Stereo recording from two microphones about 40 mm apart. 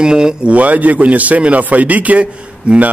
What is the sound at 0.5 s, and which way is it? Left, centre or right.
Speech, right.